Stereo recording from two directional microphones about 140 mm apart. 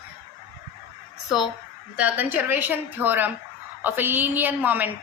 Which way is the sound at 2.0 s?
10° right (ahead or behind).